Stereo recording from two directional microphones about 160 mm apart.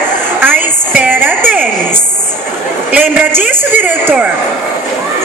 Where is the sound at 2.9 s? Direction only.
10° right (ahead or behind).